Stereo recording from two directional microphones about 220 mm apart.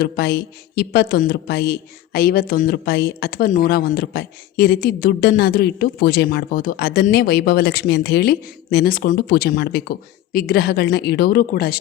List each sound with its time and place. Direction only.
0.0 s speech: 45° left (ahead or behind)